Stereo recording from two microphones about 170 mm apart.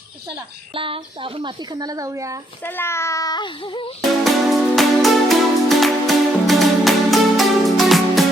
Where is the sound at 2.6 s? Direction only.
10° left (ahead or behind); by 3.9 s 30° left (ahead or behind).